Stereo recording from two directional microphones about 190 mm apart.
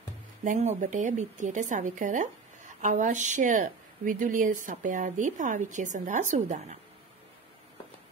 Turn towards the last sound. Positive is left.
turn(degrees=-40)  # may be behind; listen again after turning